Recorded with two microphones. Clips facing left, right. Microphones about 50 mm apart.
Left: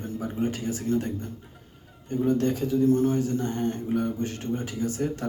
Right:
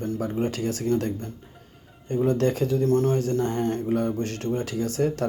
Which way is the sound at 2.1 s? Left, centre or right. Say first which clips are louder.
Right 2 dB; right.